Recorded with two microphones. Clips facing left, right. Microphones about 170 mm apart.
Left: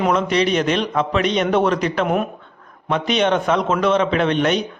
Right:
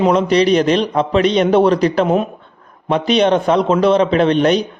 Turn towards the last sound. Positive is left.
turn(degrees=-35)  # may be behind; listen again after turning